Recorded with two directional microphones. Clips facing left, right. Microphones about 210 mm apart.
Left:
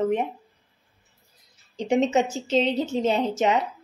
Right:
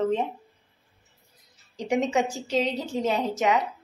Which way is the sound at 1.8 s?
25° left (ahead or behind).